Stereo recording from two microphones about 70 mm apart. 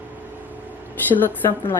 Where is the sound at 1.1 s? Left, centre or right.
Left.